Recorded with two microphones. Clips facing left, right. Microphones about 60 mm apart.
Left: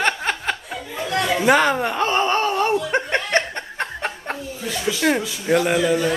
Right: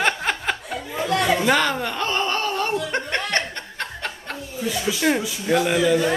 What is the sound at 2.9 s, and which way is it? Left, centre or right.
Chuckle, left.